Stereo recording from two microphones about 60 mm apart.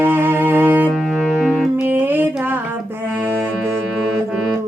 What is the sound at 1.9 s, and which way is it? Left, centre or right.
Music, right.